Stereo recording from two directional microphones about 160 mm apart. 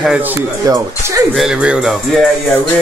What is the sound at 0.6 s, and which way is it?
Speech, 20° right (ahead or behind).